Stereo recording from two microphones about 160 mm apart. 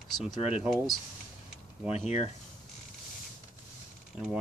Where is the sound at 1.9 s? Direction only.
40° left (ahead or behind).